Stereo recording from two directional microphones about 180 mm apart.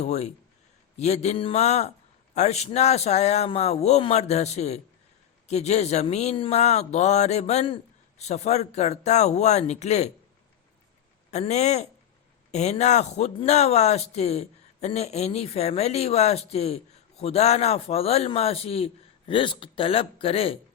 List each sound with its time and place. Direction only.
0.0 s speech: 40° left (ahead or behind)
11.3 s speech: 40° left (ahead or behind)